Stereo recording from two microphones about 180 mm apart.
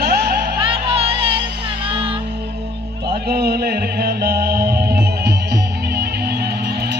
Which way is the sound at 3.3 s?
60° right (ahead or behind).